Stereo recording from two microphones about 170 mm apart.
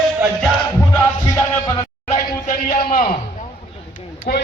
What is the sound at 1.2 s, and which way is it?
Music, 20° left (ahead or behind).